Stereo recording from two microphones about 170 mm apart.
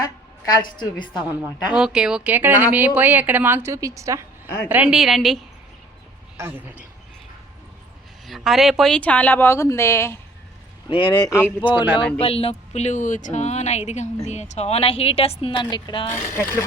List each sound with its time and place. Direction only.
0.0 s a woman's voice: 25° left (ahead or behind)
1.4 s a woman's voice: 5° right (ahead or behind)
4.4 s speech: 15° left (ahead or behind)
4.7 s speech: 5° right (ahead or behind)
8.3 s a woman's voice: centre (ahead or behind); by 10.2 s 15° left (ahead or behind)
10.8 s speech: 30° left (ahead or behind)
11.6 s speech: 25° left (ahead or behind)
16.3 s a woman's voice: 15° left (ahead or behind)